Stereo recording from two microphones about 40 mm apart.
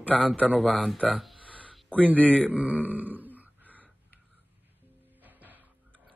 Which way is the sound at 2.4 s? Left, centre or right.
Right.